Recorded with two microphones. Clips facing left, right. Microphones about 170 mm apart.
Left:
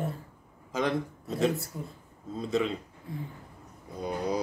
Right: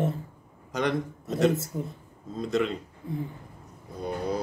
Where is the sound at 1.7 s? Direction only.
25° right (ahead or behind).